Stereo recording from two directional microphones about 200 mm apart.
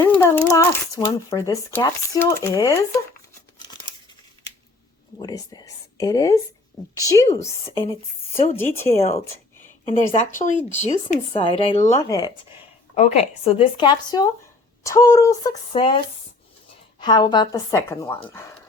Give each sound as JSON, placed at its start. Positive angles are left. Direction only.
{"t": 0.0, "sound": "speech", "side_deg": 15}
{"t": 5.2, "sound": "speech", "side_deg": 20}
{"t": 8.5, "sound": "speech", "side_deg": 15}
{"t": 9.0, "sound": "speech", "side_deg": 30}
{"t": 12.0, "sound": "a woman's voice", "side_deg": 20}
{"t": 13.0, "sound": "a woman's voice", "side_deg": 30}
{"t": 17.0, "sound": "a woman's voice", "side_deg": 20}